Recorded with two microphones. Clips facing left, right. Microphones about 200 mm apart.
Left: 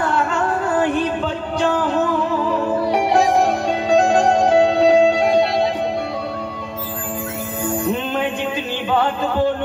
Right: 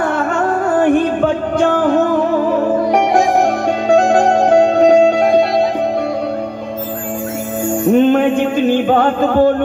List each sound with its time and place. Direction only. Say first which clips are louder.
0.0 s music: right 4 dB; 50° right (ahead or behind)
3.9 s music: right 3 dB; 60° right (ahead or behind)
7.9 s music: right 11 dB; 50° right (ahead or behind)